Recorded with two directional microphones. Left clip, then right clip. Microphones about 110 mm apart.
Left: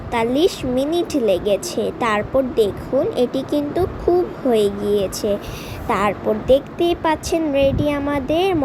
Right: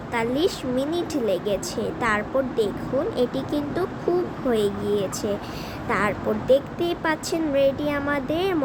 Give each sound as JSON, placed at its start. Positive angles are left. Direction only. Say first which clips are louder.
{"t": 0.1, "sound": "speech", "louder": "left 6 dB", "side_deg": 40}